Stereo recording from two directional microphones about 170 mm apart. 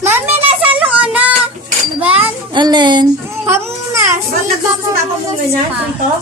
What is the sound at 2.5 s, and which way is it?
Speech, 25° right (ahead or behind).